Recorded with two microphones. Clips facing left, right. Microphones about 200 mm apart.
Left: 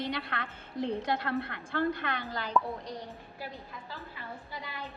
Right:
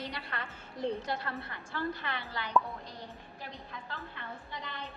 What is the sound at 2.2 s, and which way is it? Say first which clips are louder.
Speech: left 3 dB; 40° left (ahead or behind).